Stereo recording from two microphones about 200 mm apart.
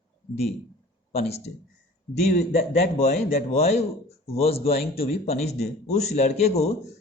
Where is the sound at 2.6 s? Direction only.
35° left (ahead or behind).